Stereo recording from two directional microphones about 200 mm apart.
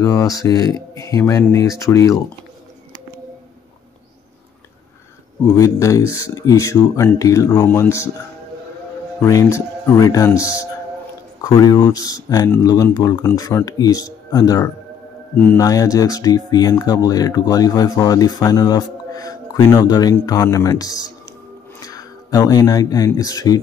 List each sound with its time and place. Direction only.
0.0 s speech: 15° left (ahead or behind)
5.4 s speech: 15° left (ahead or behind)
9.2 s speech: 15° left (ahead or behind)